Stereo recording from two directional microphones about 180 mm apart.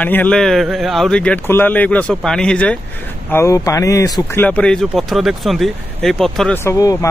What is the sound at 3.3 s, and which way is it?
Speech, 15° left (ahead or behind).